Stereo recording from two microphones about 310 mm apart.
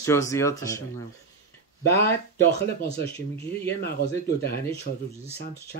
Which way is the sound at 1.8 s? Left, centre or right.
Left.